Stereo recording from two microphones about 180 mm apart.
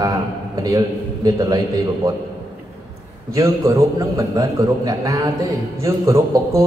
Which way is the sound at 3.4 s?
20° right (ahead or behind).